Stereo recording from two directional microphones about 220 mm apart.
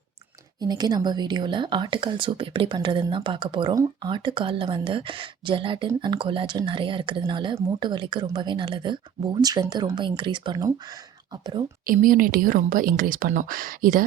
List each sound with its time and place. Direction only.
0.6 s speech: 20° right (ahead or behind)
11.9 s a woman's voice: 40° right (ahead or behind)